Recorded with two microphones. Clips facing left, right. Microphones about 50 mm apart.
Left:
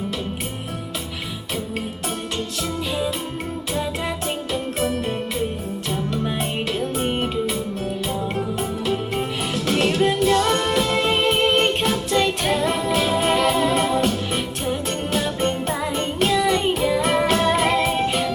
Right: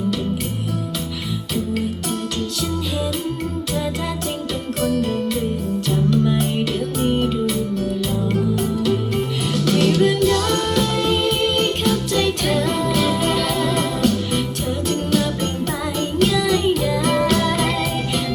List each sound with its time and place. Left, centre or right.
5.9 s music: left
9.5 s music: left